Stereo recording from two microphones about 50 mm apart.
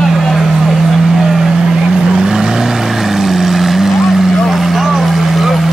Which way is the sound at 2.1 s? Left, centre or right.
Centre.